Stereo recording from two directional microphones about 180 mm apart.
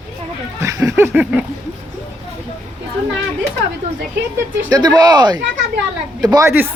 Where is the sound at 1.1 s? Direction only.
5° right (ahead or behind).